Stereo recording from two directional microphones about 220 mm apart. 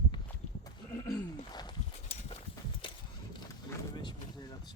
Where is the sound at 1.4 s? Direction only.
20° left (ahead or behind).